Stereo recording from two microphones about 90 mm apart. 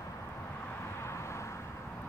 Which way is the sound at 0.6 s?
20° left (ahead or behind).